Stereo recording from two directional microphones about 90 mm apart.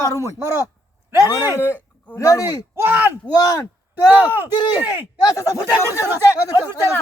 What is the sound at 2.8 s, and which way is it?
Speech, 20° right (ahead or behind).